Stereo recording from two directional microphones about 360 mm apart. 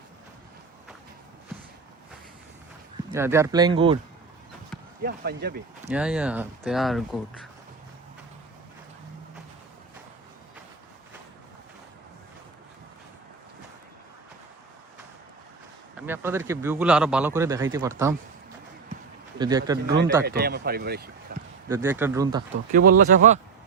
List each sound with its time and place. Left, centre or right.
3.1 s a man's voice: centre
5.0 s speech: right
5.9 s speech: centre
16.0 s a man's voice: centre
19.4 s a man's voice: centre
20.2 s speech: right
21.3 s a sound: right
21.7 s a man's voice: centre
22.7 s speech: right